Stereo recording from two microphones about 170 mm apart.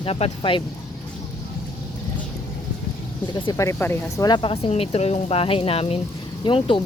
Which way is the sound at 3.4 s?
20° left (ahead or behind).